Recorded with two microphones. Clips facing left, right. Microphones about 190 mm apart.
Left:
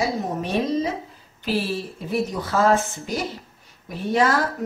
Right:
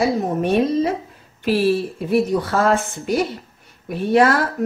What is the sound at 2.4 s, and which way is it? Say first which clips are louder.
Speech: right 1 dB; 60° right (ahead or behind).